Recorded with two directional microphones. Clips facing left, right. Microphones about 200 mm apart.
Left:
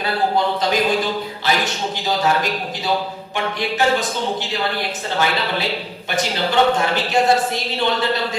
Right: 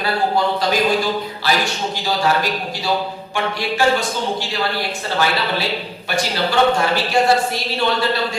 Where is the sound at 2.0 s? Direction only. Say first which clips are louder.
Even; 20° left (ahead or behind).